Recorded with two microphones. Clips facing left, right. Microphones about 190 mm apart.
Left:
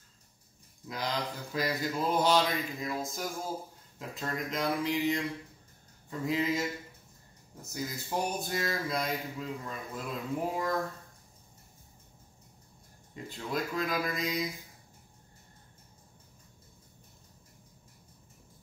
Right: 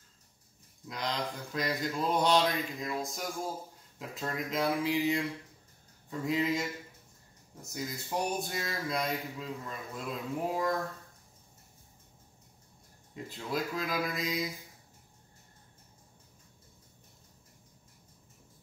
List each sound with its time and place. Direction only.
0.8 s mantra: centre (ahead or behind)
13.1 s mantra: centre (ahead or behind)